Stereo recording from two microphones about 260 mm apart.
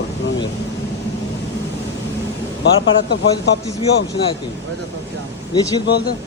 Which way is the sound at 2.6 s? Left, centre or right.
Left.